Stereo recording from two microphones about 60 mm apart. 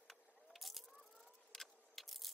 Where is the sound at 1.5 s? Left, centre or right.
Centre.